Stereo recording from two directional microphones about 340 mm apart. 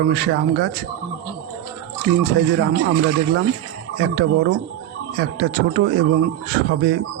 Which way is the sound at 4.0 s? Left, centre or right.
Right.